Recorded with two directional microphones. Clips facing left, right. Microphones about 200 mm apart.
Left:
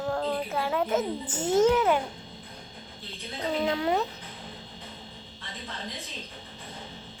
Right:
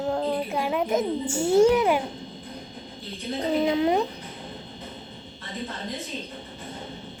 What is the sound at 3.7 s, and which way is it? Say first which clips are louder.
Speech: right 4 dB; 15° right (ahead or behind).